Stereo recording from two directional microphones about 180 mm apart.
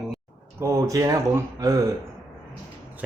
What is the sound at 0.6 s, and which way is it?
Speech, 15° right (ahead or behind).